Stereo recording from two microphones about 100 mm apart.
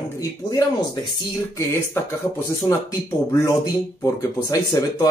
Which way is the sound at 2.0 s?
25° left (ahead or behind).